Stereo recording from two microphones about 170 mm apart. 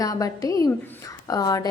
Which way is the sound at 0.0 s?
20° left (ahead or behind).